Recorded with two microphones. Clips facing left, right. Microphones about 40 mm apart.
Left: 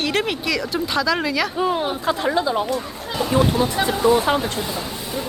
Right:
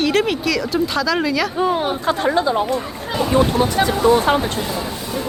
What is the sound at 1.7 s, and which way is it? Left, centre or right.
Speech, right.